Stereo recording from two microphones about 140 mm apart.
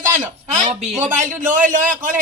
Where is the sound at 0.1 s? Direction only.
65° right (ahead or behind).